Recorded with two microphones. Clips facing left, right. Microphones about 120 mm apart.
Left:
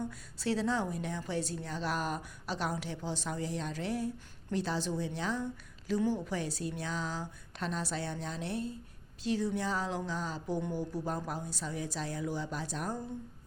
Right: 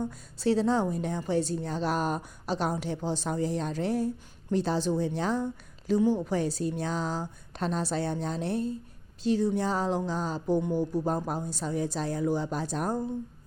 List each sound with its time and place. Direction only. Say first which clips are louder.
0.0 s a woman's voice: right 7 dB; 30° right (ahead or behind)
5.9 s a woman's voice: right 7 dB; 25° right (ahead or behind)